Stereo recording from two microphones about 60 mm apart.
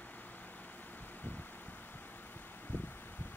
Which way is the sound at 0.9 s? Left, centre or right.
Left.